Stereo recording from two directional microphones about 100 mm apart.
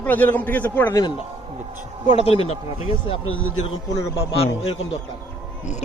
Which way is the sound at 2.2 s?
85° left.